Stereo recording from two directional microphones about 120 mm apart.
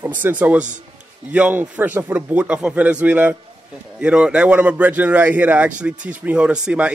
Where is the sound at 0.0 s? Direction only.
15° right (ahead or behind).